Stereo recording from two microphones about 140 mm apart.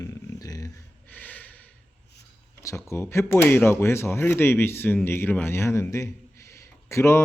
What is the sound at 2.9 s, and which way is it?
Speech, 20° left (ahead or behind).